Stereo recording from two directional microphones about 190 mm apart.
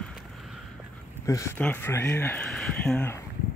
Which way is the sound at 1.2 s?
15° left (ahead or behind).